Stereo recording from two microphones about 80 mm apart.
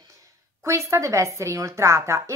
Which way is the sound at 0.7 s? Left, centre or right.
Right.